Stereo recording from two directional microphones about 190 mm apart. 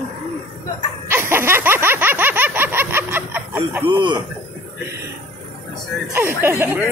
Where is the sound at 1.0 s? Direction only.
10° right (ahead or behind).